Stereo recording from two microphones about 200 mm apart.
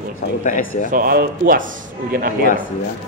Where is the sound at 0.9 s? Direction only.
45° right (ahead or behind).